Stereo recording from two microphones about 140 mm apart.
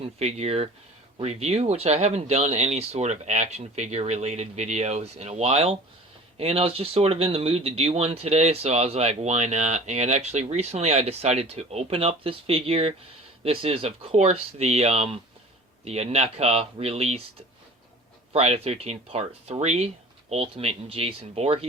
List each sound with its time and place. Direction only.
0.0 s speech: 50° right (ahead or behind)
18.3 s speech: 45° right (ahead or behind)